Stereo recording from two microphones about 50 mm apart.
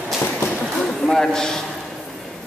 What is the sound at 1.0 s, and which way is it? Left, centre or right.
Speech, centre.